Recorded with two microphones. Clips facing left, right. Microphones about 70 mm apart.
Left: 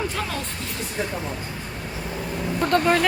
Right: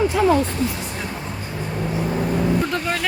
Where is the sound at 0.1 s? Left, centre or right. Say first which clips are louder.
Right 12 dB; centre.